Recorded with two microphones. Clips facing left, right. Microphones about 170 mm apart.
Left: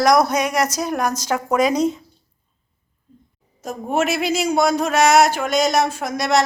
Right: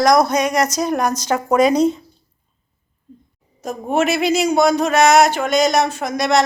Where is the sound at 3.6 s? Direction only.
5° left (ahead or behind).